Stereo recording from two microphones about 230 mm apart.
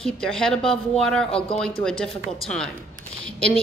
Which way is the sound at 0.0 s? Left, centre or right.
Centre.